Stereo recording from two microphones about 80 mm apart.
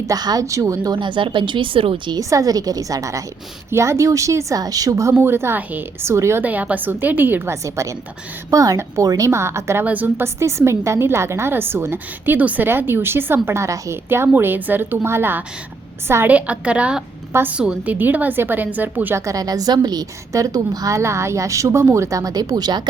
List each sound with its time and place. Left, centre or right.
0.1 s a woman's voice: right
0.9 s speech: right
2.1 s a woman's voice: right
5.1 s a woman's voice: right
6.4 s a woman's voice: centre
7.5 s a woman's voice: right
9.8 s a woman's voice: right
10.2 s a woman's voice: right
14.1 s a woman's voice: right
16.3 s a woman's voice: centre
19.2 s a woman's voice: right